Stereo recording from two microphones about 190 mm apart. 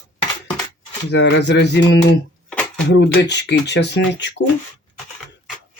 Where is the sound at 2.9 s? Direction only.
65° left (ahead or behind).